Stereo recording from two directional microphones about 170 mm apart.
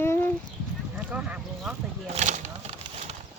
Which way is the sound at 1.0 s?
10° right (ahead or behind).